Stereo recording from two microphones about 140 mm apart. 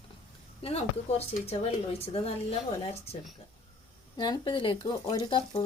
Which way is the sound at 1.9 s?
45° left (ahead or behind).